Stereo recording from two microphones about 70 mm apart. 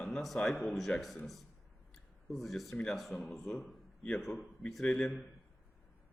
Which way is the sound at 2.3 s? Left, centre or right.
Centre.